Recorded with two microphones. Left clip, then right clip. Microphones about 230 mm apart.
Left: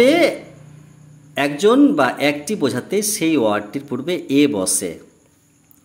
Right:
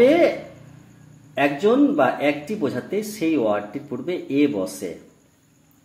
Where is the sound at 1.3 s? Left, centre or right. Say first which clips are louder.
Left 3 dB; left.